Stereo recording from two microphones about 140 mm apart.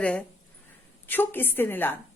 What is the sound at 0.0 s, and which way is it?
A woman's voice, 10° left (ahead or behind).